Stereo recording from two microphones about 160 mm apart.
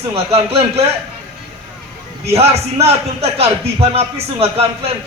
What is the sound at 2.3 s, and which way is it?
A man's voice, 40° right (ahead or behind).